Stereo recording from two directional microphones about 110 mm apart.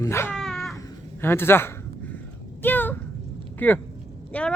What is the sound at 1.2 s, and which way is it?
Speech, 20° left (ahead or behind).